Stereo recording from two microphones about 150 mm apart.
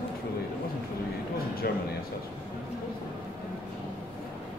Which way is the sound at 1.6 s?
90° left.